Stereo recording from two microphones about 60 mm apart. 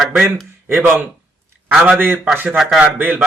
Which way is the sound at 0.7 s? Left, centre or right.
Right.